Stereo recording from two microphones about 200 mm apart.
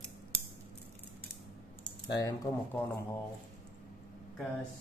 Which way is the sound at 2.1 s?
20° left (ahead or behind).